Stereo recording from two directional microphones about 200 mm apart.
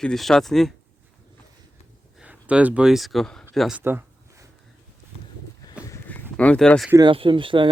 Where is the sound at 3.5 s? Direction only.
Centre (ahead or behind).